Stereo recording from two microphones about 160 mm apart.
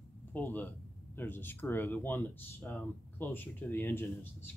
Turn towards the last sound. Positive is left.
turn(degrees=15)  # may be behind; listen again after turning